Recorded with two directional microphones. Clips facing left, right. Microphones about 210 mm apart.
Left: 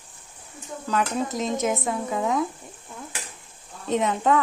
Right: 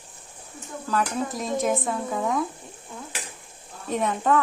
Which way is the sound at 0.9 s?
20° left (ahead or behind).